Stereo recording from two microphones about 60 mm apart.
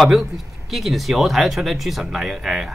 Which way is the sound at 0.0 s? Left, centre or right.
Centre.